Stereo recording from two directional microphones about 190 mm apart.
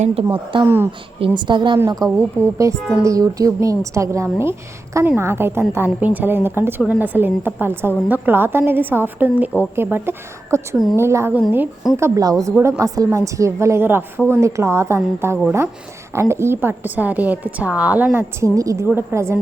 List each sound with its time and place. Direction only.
0.0 s a woman's voice: 30° right (ahead or behind)
2.0 s a woman's voice: 5° left (ahead or behind)
2.9 s a woman's voice: 15° right (ahead or behind)